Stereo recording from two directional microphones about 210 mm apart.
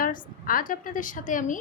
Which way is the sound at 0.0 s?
40° left (ahead or behind).